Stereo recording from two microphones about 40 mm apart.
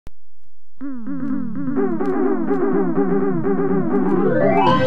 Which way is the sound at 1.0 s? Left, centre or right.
Centre.